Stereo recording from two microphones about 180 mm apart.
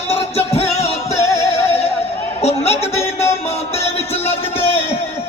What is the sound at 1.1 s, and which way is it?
Music, 15° left (ahead or behind).